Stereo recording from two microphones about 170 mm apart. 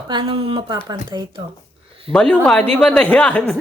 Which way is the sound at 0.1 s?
30° right (ahead or behind).